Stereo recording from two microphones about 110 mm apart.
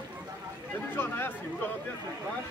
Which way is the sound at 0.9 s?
20° left (ahead or behind).